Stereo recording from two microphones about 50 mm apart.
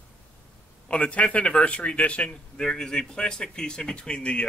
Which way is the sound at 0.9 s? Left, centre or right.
Left.